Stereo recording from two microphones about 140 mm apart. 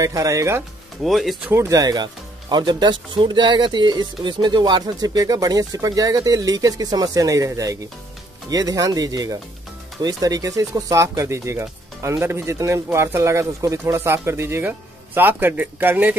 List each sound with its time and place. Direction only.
0.0 s speech: 25° right (ahead or behind)
1.0 s speech: centre (ahead or behind)
1.5 s speech: 20° right (ahead or behind)